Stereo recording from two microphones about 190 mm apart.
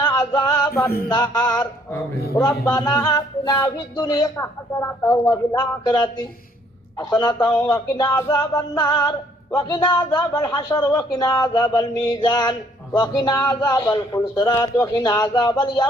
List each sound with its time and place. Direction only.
0.3 s a man's voice: 20° left (ahead or behind)
5.5 s a man's voice: 20° left (ahead or behind)